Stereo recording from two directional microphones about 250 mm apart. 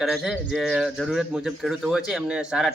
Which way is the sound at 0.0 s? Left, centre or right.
Centre.